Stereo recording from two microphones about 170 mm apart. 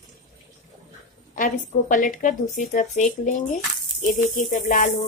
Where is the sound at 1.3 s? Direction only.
50° left (ahead or behind).